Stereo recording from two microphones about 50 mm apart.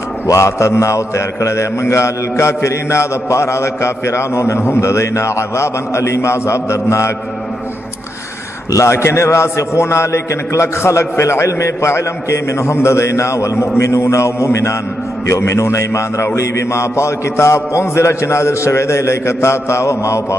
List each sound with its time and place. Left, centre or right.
0.3 s a man's voice: left
8.8 s a man's voice: left
13.7 s mantra: left
16.3 s a man's voice: left